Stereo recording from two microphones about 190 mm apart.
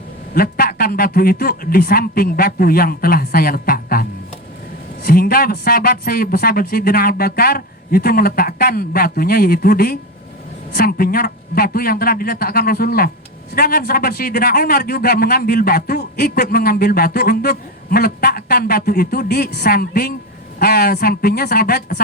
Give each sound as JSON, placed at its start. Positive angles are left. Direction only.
{"t": 0.3, "sound": "a man's voice", "side_deg": 50}
{"t": 5.0, "sound": "a man's voice", "side_deg": 50}